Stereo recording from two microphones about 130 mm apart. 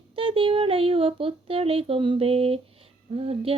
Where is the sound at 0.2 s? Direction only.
45° right (ahead or behind).